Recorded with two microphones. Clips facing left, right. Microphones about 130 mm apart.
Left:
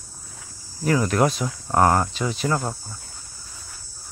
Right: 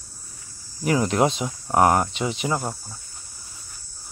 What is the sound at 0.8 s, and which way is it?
Speech, 20° right (ahead or behind).